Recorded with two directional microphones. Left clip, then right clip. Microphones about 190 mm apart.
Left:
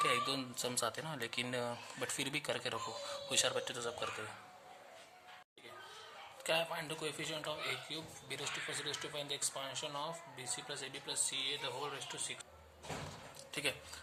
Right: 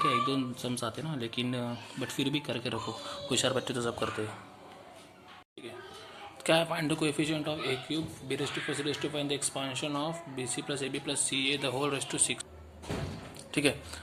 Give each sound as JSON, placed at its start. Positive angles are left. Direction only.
{"t": 0.0, "sound": "speech", "side_deg": 25}
{"t": 6.4, "sound": "a man's voice", "side_deg": -15}
{"t": 13.5, "sound": "speech", "side_deg": -15}